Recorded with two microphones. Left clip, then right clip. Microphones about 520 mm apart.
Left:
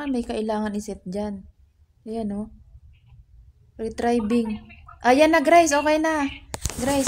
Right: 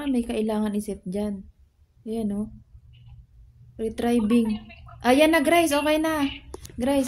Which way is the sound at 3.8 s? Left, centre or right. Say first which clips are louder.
Left 2 dB; right.